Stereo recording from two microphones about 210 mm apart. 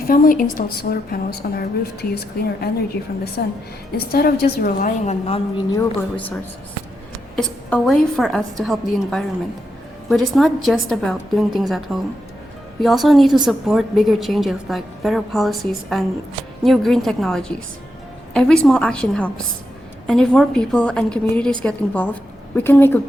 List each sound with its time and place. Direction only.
0.1 s a woman's voice: 40° left (ahead or behind)
5.7 s a woman's voice: 10° left (ahead or behind)